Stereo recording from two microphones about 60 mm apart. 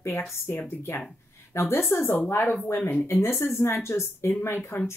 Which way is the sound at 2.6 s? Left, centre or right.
Left.